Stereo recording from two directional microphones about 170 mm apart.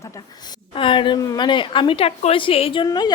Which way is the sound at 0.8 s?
30° left (ahead or behind).